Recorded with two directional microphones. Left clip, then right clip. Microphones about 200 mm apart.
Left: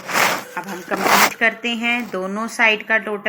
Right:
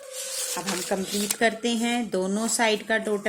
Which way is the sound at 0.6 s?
10° right (ahead or behind).